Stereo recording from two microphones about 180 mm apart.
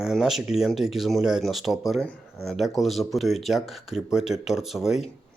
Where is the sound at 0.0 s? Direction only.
Centre (ahead or behind).